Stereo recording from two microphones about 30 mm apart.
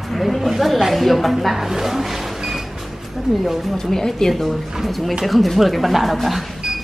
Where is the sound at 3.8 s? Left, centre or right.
Centre.